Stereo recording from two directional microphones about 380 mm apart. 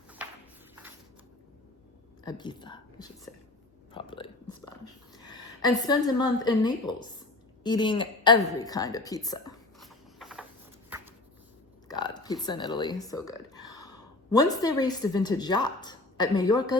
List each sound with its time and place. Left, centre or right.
2.2 s speech: centre
3.9 s whispering: centre
5.1 s a woman's voice: centre
10.2 s a sound: centre
11.9 s speech: centre